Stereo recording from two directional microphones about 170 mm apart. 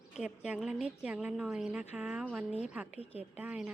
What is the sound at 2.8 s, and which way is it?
Speech, 35° left (ahead or behind).